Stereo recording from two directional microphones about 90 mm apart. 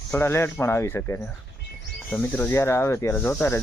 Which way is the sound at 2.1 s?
20° left (ahead or behind).